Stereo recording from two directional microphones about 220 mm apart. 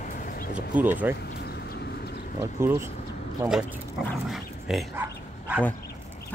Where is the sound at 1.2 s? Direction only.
50° left (ahead or behind).